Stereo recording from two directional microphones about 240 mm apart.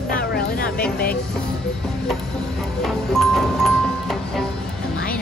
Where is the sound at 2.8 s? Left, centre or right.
Centre.